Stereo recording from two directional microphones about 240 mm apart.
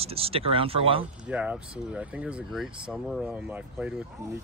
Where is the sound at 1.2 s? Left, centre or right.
Centre.